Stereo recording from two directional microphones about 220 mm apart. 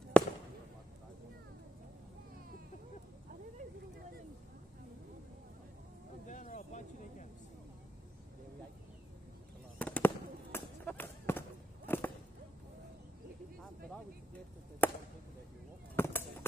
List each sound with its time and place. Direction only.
0.2 s fireworks: 5° left (ahead or behind)
6.2 s a sound: 35° left (ahead or behind)
9.8 s fireworks: 5° left (ahead or behind)
14.8 s chop: 10° left (ahead or behind)
16.0 s chop: 10° left (ahead or behind)